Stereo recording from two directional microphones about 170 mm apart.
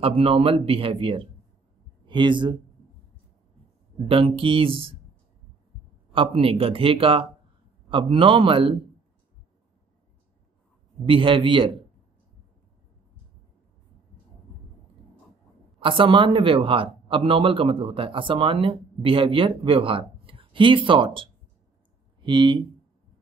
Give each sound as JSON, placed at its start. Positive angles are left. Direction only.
{"t": 0.0, "sound": "a man's voice", "side_deg": -35}
{"t": 4.1, "sound": "a man's voice", "side_deg": -30}
{"t": 6.1, "sound": "a man's voice", "side_deg": -35}
{"t": 11.1, "sound": "a man's voice", "side_deg": -30}
{"t": 15.8, "sound": "a man's voice", "side_deg": -30}